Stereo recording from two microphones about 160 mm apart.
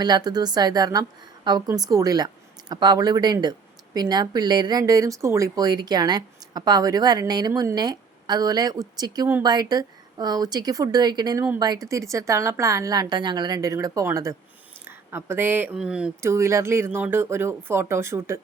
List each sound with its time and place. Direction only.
0.0 s speech: 25° right (ahead or behind); by 16.3 s 5° right (ahead or behind)
16.3 s speech: 15° right (ahead or behind)